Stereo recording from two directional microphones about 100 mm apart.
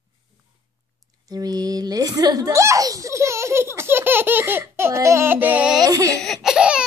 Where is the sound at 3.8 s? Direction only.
25° right (ahead or behind).